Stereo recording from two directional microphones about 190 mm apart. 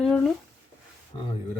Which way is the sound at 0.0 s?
Centre (ahead or behind).